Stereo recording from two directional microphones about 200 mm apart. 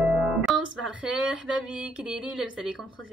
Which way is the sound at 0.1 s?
5° right (ahead or behind).